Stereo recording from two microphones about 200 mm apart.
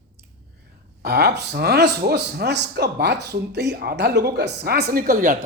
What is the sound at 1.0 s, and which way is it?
Speech, 55° right (ahead or behind).